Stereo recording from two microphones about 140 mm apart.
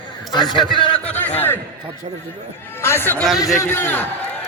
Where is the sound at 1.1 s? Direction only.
15° left (ahead or behind).